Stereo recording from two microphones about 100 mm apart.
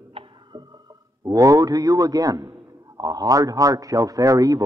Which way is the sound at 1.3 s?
35° right (ahead or behind).